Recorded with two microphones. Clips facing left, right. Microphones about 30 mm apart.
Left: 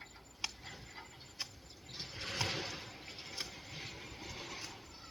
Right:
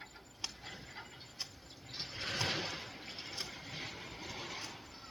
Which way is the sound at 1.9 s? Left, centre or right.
Right.